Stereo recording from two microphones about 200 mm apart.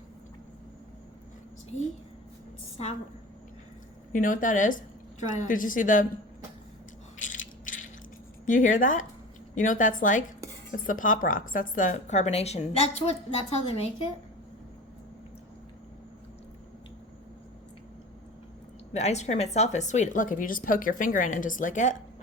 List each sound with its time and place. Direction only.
4.1 s speech: 40° left (ahead or behind)
7.2 s ratchet: 40° left (ahead or behind)
8.4 s speech: 40° left (ahead or behind)
18.9 s speech: 35° left (ahead or behind)